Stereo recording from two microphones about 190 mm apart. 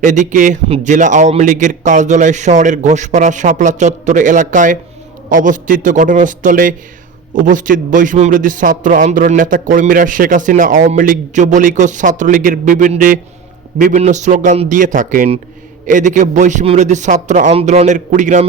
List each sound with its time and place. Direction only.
0.0 s a man's voice: 40° right (ahead or behind)